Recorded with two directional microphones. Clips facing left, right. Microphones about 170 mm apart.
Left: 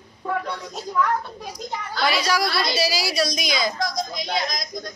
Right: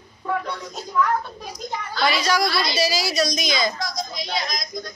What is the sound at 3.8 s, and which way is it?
Speech, 50° left (ahead or behind).